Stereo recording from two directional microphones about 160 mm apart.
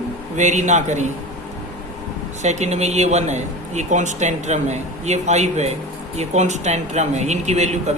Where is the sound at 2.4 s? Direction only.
45° right (ahead or behind).